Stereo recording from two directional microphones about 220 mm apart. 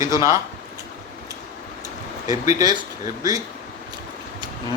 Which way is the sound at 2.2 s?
15° right (ahead or behind).